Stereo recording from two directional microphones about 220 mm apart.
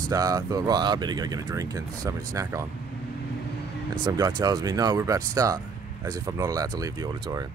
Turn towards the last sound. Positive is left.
turn(degrees=-15)  # may be behind; listen again after turning